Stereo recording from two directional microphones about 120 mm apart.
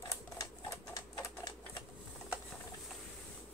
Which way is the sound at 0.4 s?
30° left (ahead or behind).